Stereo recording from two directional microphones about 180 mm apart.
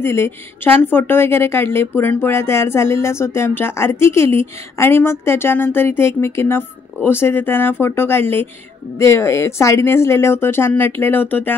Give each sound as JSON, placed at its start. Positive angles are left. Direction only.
{"t": 0.0, "sound": "a woman's voice", "side_deg": 15}